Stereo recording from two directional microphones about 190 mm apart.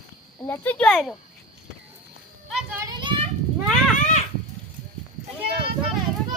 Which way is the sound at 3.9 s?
40° left (ahead or behind).